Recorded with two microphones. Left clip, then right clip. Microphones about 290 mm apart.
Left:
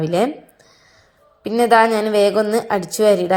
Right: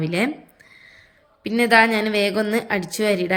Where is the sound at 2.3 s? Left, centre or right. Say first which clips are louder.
Left 5 dB; centre.